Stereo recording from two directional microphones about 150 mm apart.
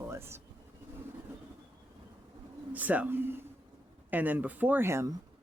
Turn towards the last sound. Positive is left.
turn(degrees=-20)  # may be behind; listen again after turning